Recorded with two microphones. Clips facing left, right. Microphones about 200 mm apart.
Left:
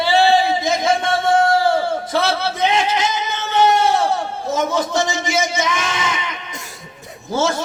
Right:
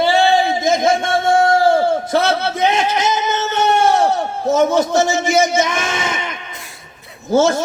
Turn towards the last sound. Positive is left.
turn(degrees=-50)  # may be behind; listen again after turning